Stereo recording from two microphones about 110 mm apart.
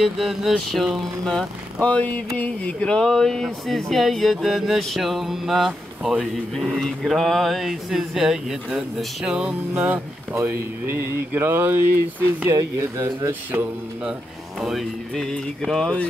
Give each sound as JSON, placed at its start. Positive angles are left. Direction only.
{"t": 0.0, "sound": "speech", "side_deg": 0}
{"t": 14.6, "sound": "speech", "side_deg": 0}